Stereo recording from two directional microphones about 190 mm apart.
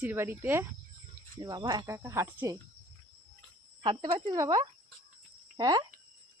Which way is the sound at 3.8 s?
25° right (ahead or behind).